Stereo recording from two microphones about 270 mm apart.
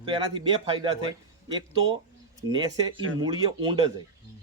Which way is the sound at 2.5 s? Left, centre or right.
Centre.